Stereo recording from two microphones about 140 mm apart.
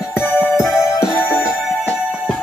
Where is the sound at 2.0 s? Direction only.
Centre (ahead or behind).